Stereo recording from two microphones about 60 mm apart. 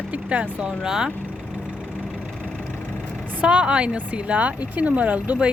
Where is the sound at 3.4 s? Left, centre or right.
Centre.